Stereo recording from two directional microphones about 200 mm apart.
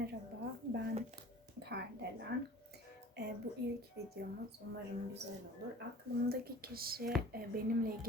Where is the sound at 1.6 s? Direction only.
55° right (ahead or behind).